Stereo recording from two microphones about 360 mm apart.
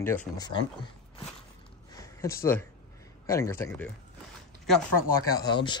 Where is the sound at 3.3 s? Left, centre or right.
Centre.